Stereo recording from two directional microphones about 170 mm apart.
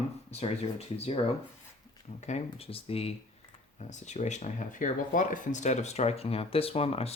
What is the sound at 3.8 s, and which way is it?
Speech, 45° left (ahead or behind).